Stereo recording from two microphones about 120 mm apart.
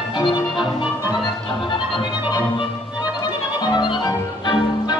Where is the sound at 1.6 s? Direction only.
45° left (ahead or behind).